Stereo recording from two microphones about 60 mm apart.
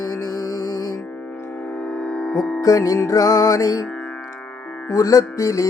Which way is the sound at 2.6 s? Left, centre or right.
Left.